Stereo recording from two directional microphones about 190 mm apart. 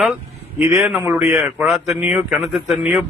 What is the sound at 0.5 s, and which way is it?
Speech, 15° right (ahead or behind).